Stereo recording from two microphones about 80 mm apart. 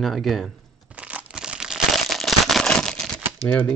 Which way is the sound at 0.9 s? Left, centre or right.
Centre.